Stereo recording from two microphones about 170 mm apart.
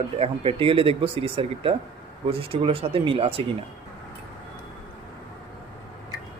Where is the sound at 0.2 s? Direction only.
35° right (ahead or behind).